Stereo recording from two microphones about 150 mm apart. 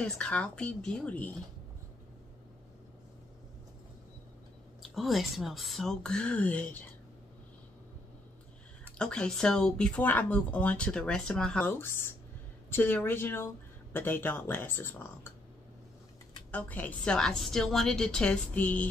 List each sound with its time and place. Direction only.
0.0 s speech: 10° left (ahead or behind)
4.8 s speech: centre (ahead or behind)
8.9 s speech: 5° left (ahead or behind)
11.8 s speech: 15° left (ahead or behind)
16.5 s speech: 10° left (ahead or behind)